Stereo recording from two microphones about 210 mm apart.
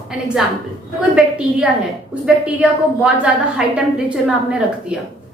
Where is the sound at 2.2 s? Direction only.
5° right (ahead or behind).